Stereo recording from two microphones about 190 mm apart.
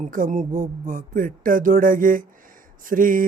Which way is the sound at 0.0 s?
45° right (ahead or behind).